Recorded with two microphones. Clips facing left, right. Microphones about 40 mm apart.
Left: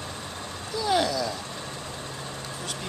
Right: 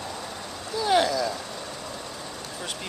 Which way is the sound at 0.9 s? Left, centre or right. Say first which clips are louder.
Right 2 dB; centre.